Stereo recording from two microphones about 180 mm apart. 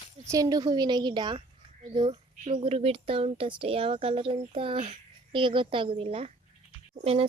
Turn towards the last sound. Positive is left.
turn(degrees=-35)  # may be behind; listen again after turning